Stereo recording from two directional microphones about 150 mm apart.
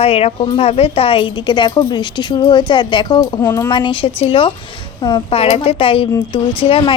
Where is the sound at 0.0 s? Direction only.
40° left (ahead or behind); by 3.7 s 20° left (ahead or behind).